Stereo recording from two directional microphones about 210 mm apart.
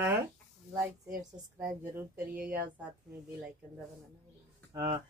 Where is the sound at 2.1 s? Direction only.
45° right (ahead or behind).